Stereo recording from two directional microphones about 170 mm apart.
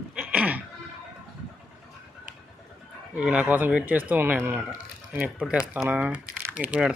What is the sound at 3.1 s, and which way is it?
Speech, 5° right (ahead or behind).